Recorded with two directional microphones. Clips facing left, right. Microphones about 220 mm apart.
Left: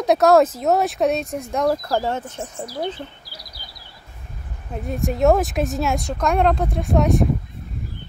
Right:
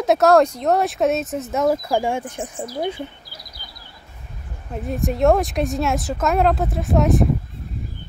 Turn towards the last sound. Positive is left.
turn(degrees=0)  # may be behind; listen again after turning